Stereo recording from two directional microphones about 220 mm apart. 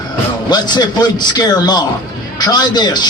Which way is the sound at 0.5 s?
20° left (ahead or behind).